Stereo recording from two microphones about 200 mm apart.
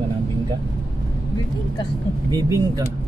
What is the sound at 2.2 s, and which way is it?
Speech, 15° right (ahead or behind).